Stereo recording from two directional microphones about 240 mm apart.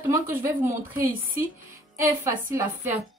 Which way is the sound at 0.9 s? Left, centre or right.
Right.